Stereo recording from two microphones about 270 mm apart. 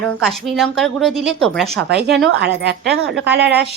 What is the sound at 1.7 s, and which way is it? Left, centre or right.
A woman's voice, right.